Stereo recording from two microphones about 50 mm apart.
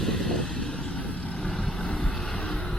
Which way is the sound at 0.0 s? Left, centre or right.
Centre.